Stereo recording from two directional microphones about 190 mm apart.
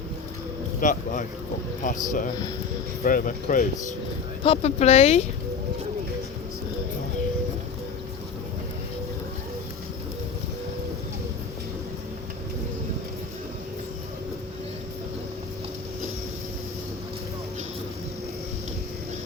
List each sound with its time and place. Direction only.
0.8 s speech: 40° left (ahead or behind)
4.4 s speech: 30° left (ahead or behind)